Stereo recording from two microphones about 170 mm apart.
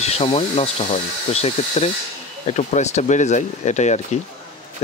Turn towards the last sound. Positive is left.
turn(degrees=45)  # may be behind; listen again after turning